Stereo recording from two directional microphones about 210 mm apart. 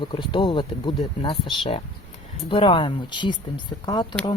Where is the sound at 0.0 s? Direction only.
25° left (ahead or behind).